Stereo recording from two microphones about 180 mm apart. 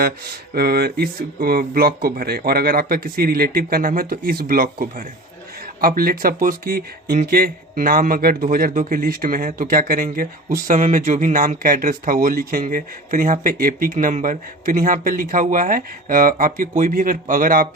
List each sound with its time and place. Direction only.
0.5 s speech: 60° right (ahead or behind)